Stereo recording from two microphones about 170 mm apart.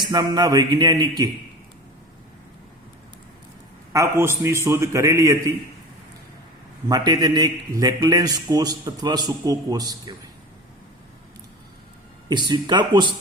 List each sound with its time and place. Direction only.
0.0 s a man's voice: 25° right (ahead or behind)
3.9 s a man's voice: 15° right (ahead or behind)
6.8 s a man's voice: 20° right (ahead or behind)
12.3 s a man's voice: 25° right (ahead or behind)